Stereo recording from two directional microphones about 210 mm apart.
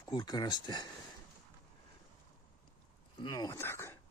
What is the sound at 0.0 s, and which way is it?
Speech, 20° left (ahead or behind).